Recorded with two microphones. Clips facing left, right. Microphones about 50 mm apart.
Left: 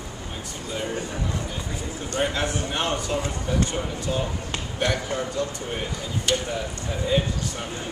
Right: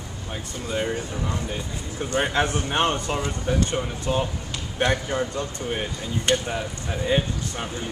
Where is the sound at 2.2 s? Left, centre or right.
Right.